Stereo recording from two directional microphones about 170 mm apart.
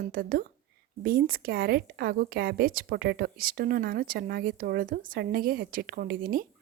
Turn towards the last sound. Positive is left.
turn(degrees=-60)  # may be behind; listen again after turning